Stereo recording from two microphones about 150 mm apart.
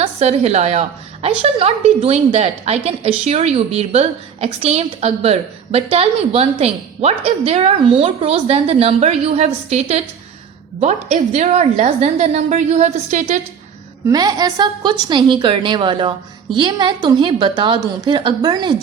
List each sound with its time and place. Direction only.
0.0 s a woman's voice: 45° right (ahead or behind)
14.1 s a woman's voice: 25° right (ahead or behind)